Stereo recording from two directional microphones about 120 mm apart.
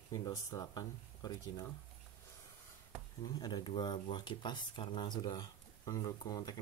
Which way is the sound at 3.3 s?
35° left (ahead or behind).